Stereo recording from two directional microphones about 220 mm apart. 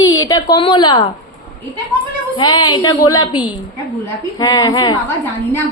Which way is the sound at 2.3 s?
20° left (ahead or behind).